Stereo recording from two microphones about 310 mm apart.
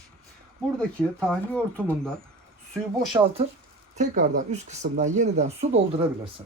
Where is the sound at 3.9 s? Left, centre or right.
Right.